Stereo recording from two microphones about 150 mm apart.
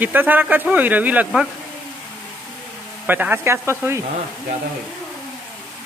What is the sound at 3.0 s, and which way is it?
Speech, 10° right (ahead or behind).